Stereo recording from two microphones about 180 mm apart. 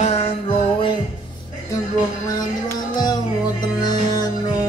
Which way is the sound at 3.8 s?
20° left (ahead or behind).